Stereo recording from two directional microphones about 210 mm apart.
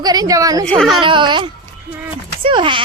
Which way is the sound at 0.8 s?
Centre (ahead or behind).